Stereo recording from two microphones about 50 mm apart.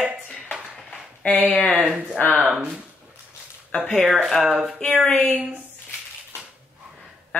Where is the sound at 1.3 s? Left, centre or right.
Left.